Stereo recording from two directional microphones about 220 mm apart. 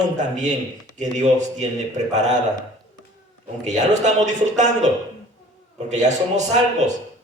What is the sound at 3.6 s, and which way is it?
A man's voice, 30° right (ahead or behind).